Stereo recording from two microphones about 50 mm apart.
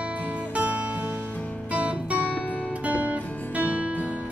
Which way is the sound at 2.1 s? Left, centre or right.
Left.